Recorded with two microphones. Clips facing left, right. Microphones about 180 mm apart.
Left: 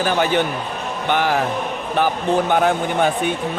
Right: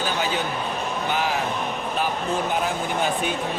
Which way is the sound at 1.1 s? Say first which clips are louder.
Left 8 dB; 65° left (ahead or behind).